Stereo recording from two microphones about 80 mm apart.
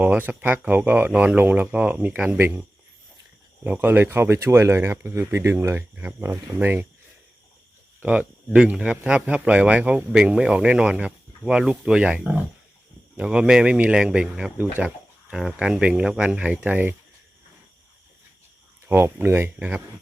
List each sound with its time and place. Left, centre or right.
0.0 s speech: right
5.9 s speech: right
6.2 s speech: right
6.6 s speech: right
8.0 s speech: centre
14.8 s a sound: centre
15.4 s speech: centre
18.9 s speech: right